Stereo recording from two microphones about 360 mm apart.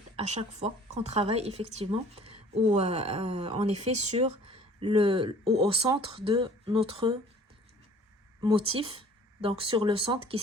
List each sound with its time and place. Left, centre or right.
0.2 s a woman's voice: centre
8.4 s speech: centre